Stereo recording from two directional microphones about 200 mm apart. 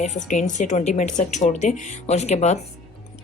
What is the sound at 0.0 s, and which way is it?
A woman's voice, 35° left (ahead or behind).